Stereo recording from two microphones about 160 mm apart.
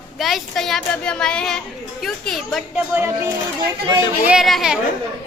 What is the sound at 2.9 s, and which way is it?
Speech, 15° right (ahead or behind).